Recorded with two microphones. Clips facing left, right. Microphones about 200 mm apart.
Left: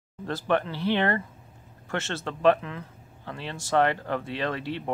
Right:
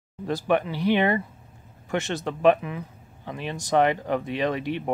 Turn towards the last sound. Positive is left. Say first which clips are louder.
# right 4 dB
turn(degrees=-15)  # may be behind; listen again after turning